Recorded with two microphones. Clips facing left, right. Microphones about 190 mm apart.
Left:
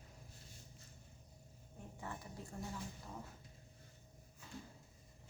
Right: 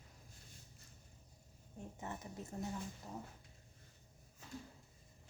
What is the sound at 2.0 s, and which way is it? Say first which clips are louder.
Speech: right 1 dB; 20° right (ahead or behind).